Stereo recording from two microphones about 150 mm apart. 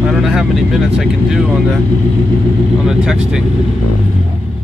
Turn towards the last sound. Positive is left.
turn(degrees=-5)  # may be behind; listen again after turning